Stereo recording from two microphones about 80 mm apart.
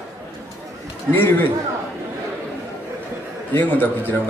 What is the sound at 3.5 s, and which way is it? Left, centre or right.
Speech, left.